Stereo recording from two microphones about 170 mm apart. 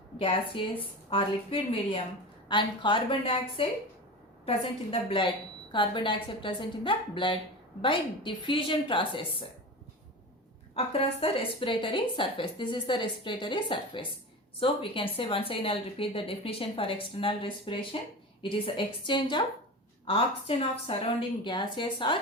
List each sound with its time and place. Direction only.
0.2 s a woman's voice: 30° left (ahead or behind)
10.8 s a woman's voice: 35° left (ahead or behind)